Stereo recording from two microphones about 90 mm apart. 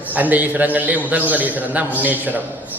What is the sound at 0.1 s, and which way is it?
A man's voice, 20° right (ahead or behind).